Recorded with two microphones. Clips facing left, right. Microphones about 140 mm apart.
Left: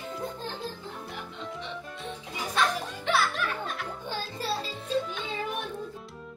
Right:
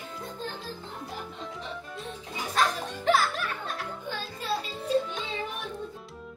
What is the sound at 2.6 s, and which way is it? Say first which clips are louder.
Music: right 1 dB; 40° right (ahead or behind).